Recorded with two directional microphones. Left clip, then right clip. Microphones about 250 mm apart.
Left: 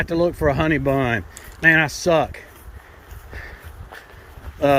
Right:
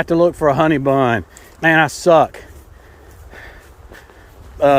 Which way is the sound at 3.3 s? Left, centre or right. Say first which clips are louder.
Even; centre.